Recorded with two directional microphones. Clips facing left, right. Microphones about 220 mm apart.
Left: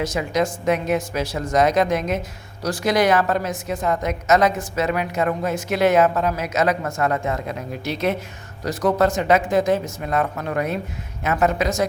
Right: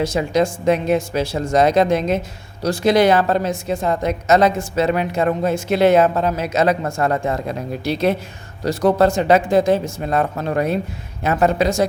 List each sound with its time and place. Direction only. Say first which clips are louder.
0.0 s a woman's voice: right 4 dB; 30° right (ahead or behind)